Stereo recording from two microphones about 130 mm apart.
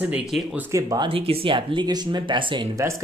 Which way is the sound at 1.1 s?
45° right (ahead or behind).